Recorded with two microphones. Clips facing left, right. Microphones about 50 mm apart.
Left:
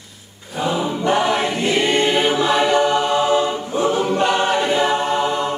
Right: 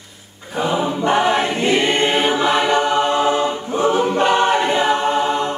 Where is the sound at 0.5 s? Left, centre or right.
Right.